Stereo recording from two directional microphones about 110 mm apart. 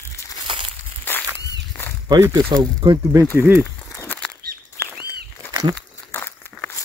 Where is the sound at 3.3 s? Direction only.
20° right (ahead or behind).